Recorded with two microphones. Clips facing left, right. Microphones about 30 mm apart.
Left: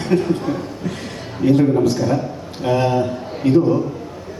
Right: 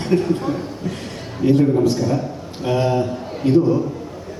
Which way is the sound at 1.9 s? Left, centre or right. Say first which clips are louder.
Left 2 dB; centre.